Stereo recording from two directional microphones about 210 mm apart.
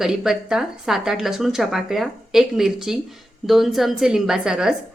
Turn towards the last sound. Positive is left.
turn(degrees=0)  # may be behind; listen again after turning